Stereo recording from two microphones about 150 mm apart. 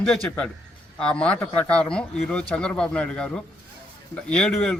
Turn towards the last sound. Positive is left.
turn(degrees=5)  # may be behind; listen again after turning